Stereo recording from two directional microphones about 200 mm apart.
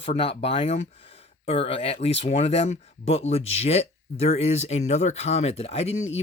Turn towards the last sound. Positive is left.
turn(degrees=35)  # may be behind; listen again after turning